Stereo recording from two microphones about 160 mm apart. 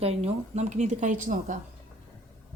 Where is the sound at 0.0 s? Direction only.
40° right (ahead or behind).